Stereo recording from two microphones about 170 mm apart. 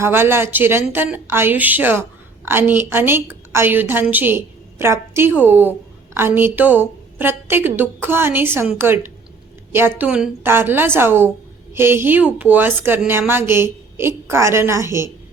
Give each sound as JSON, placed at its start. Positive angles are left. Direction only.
{"t": 0.0, "sound": "a woman's voice", "side_deg": -15}
{"t": 8.6, "sound": "a woman's voice", "side_deg": 0}
{"t": 10.0, "sound": "speech", "side_deg": -10}